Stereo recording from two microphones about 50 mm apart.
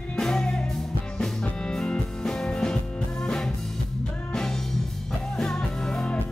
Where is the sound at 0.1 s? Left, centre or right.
Centre.